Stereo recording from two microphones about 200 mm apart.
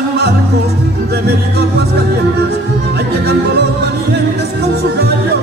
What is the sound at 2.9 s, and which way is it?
Music, 55° right (ahead or behind).